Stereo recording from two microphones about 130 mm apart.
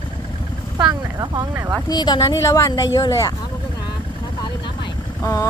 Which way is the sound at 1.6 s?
25° right (ahead or behind).